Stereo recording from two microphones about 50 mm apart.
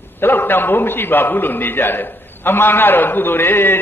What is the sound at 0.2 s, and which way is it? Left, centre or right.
A man's voice, left.